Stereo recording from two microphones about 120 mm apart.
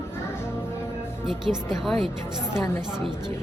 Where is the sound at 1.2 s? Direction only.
5° right (ahead or behind).